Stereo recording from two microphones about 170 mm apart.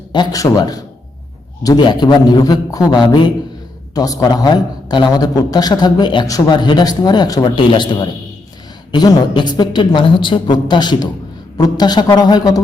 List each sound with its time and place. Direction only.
0.1 s a man's voice: 25° left (ahead or behind)